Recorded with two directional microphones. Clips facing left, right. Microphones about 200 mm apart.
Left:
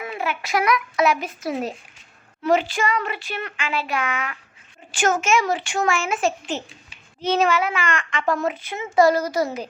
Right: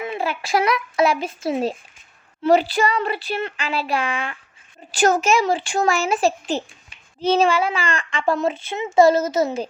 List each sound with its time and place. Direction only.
0.0 s a child's voice: 25° right (ahead or behind)